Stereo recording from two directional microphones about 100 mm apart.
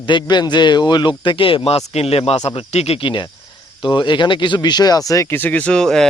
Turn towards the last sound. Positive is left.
turn(degrees=5)  # may be behind; listen again after turning